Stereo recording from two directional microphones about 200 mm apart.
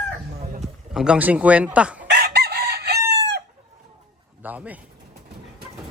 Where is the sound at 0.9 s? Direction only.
5° right (ahead or behind).